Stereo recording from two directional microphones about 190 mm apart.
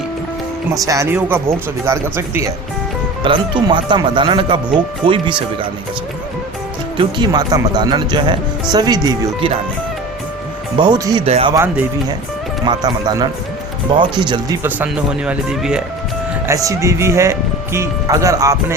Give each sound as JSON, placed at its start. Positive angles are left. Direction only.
{"t": 0.8, "sound": "speech", "side_deg": -15}
{"t": 3.2, "sound": "speech", "side_deg": -25}
{"t": 6.9, "sound": "speech", "side_deg": -20}
{"t": 10.8, "sound": "speech", "side_deg": -20}
{"t": 11.3, "sound": "speech", "side_deg": -30}
{"t": 11.5, "sound": "speech", "side_deg": -15}
{"t": 14.6, "sound": "speech", "side_deg": -10}
{"t": 16.5, "sound": "speech", "side_deg": -15}